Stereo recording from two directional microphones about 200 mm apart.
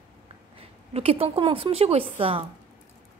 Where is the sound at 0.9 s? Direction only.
30° right (ahead or behind).